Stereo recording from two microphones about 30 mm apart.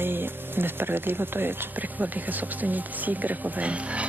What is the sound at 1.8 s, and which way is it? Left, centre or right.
Speech, right.